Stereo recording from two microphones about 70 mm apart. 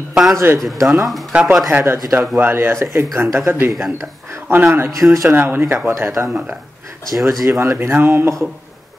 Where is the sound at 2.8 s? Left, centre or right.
Right.